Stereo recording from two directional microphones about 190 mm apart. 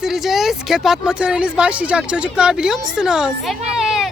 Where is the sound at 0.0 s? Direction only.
Centre (ahead or behind).